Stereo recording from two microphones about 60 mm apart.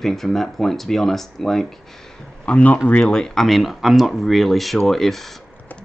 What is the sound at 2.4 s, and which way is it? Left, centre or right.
Speech, left.